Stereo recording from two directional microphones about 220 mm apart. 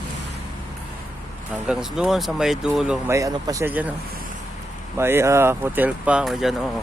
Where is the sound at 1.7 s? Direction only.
Centre (ahead or behind).